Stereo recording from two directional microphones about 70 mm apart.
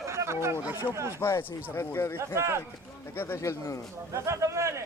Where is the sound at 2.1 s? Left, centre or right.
Right.